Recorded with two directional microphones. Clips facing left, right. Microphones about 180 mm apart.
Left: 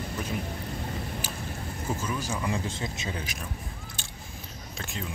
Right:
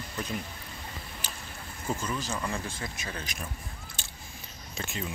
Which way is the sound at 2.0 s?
10° left (ahead or behind).